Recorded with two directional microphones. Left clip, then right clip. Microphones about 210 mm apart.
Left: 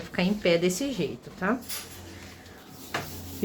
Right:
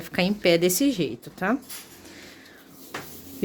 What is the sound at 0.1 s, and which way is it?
A woman's voice, 50° right (ahead or behind).